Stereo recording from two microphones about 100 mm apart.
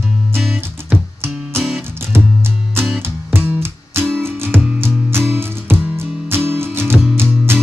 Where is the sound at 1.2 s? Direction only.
25° right (ahead or behind).